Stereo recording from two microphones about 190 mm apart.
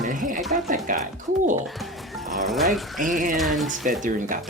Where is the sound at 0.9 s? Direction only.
45° right (ahead or behind).